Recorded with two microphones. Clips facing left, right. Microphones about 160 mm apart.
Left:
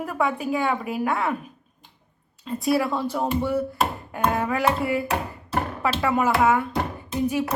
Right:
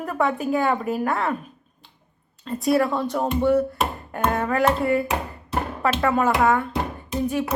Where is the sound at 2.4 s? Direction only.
5° left (ahead or behind).